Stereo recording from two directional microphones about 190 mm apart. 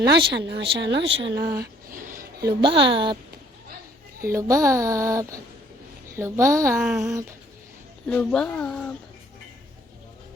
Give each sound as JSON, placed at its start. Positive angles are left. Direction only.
{"t": 0.1, "sound": "speech", "side_deg": -65}
{"t": 1.9, "sound": "a sound", "side_deg": -45}
{"t": 2.4, "sound": "a woman's voice", "side_deg": -25}
{"t": 4.2, "sound": "speech", "side_deg": -15}
{"t": 6.8, "sound": "speech", "side_deg": 0}
{"t": 7.1, "sound": "speech", "side_deg": -15}
{"t": 8.0, "sound": "speech", "side_deg": 5}